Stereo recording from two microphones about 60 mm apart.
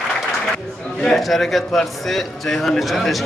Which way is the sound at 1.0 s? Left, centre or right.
Centre.